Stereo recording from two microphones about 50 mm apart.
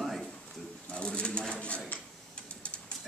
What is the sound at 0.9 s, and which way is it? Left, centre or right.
Speech, left.